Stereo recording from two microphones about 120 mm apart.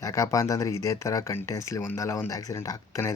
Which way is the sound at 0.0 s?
25° left (ahead or behind).